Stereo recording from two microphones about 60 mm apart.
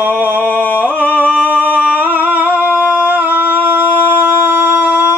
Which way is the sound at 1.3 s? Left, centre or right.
Right.